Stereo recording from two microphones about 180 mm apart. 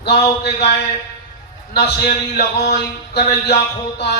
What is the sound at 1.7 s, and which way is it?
A man's voice, 65° left (ahead or behind).